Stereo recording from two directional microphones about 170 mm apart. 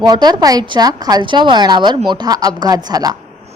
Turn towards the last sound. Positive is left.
turn(degrees=-20)  # may be behind; listen again after turning